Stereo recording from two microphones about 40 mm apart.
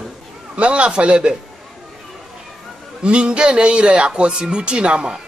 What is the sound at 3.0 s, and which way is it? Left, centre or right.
A man's voice, right.